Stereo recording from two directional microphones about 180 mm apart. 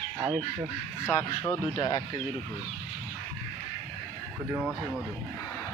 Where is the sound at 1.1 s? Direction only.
15° left (ahead or behind).